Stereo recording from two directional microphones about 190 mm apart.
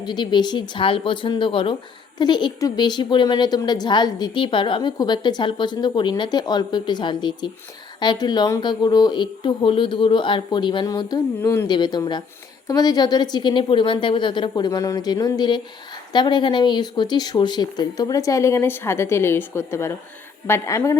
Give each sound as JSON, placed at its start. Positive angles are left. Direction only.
{"t": 0.0, "sound": "a woman's voice", "side_deg": 20}